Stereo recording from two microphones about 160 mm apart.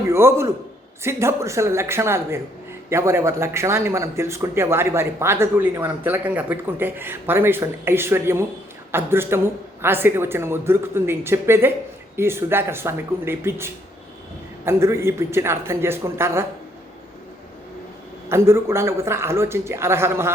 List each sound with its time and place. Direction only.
0.0 s a man's voice: 15° right (ahead or behind)
18.3 s speech: 15° right (ahead or behind)